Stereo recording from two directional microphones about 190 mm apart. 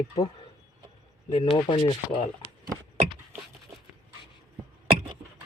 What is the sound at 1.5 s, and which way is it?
Speech, 25° left (ahead or behind).